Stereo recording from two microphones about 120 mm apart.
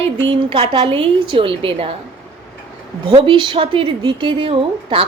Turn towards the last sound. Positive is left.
turn(degrees=-50)  # may be behind; listen again after turning